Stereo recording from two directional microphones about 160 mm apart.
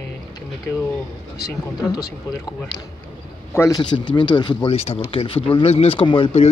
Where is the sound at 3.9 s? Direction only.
30° left (ahead or behind).